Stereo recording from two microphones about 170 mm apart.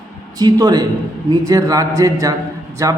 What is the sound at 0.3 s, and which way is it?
A man's voice, 20° right (ahead or behind).